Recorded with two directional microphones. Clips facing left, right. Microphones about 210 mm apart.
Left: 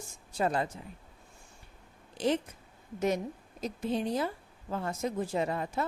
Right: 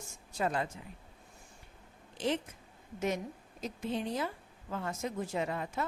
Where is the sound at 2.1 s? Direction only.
40° left (ahead or behind).